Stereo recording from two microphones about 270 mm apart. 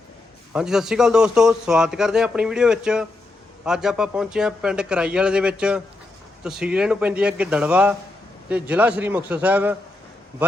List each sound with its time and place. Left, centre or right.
0.5 s a man's voice: centre